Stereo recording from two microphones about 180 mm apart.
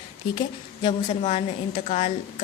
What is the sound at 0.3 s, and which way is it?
A woman's voice, 30° left (ahead or behind).